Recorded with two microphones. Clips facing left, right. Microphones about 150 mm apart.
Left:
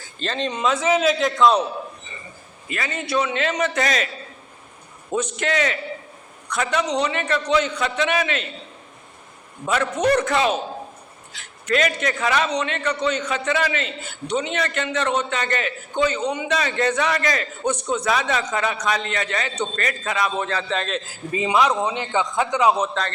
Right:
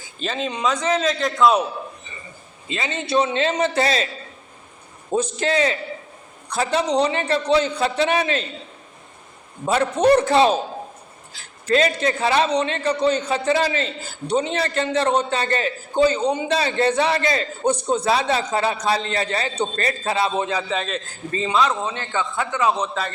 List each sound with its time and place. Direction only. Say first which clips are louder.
0.0 s a man's voice: even; 5° right (ahead or behind)
2.6 s a man's voice: right 2 dB; 25° right (ahead or behind)
5.1 s a man's voice: right 2 dB; 30° right (ahead or behind)
9.6 s a man's voice: right 4 dB; 35° right (ahead or behind); by 22.9 s 15° left (ahead or behind)